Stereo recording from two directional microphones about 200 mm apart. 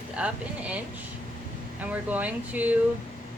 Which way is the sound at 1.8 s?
5° right (ahead or behind).